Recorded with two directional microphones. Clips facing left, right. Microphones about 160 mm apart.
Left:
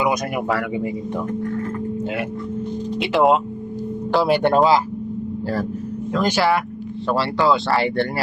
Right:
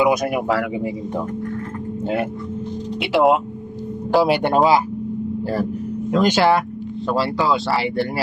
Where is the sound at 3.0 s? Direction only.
5° right (ahead or behind).